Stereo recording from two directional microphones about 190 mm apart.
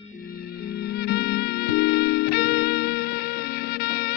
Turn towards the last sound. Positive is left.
turn(degrees=55)  # may be behind; listen again after turning